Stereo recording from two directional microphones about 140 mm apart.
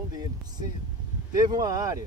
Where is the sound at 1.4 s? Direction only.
25° right (ahead or behind).